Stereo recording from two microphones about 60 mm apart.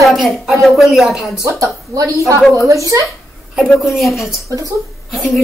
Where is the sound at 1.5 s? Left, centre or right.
Right.